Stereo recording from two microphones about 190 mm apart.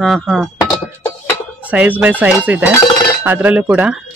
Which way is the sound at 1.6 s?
5° right (ahead or behind).